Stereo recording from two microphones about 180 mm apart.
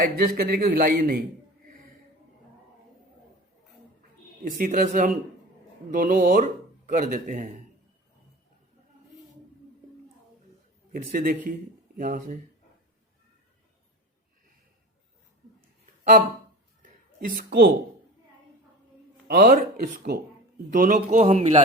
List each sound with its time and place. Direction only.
0.0 s a man's voice: 55° right (ahead or behind)
4.4 s speech: 50° right (ahead or behind)
10.9 s speech: 50° right (ahead or behind)
17.2 s speech: 55° right (ahead or behind)
19.3 s speech: 50° right (ahead or behind)
20.7 s a man's voice: 40° right (ahead or behind)